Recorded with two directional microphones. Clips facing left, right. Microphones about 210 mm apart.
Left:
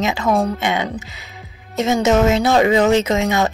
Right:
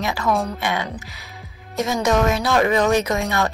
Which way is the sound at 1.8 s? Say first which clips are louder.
Left 4 dB; 25° left (ahead or behind).